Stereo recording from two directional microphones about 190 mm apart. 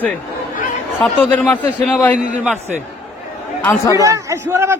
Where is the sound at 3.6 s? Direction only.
15° left (ahead or behind).